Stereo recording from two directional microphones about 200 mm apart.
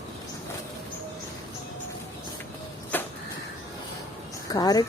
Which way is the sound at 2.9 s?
10° left (ahead or behind).